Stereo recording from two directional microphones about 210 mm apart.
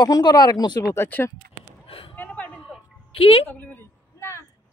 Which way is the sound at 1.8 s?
25° left (ahead or behind).